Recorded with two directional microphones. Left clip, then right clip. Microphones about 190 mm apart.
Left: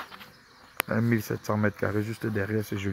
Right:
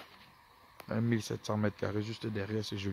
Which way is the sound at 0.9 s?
15° right (ahead or behind).